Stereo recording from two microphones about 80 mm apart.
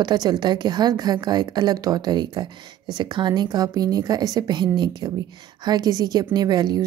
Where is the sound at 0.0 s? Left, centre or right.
Right.